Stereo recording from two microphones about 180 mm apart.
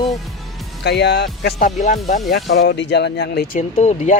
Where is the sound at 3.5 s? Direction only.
40° left (ahead or behind).